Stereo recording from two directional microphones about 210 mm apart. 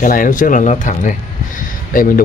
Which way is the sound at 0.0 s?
40° left (ahead or behind).